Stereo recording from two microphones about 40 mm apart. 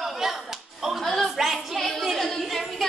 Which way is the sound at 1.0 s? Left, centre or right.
Centre.